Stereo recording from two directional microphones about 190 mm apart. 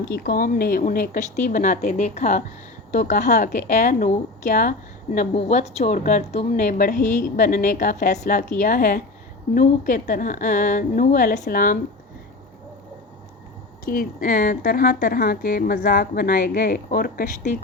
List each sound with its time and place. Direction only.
0.1 s a woman's voice: 55° left (ahead or behind)
13.9 s a woman's voice: 50° left (ahead or behind)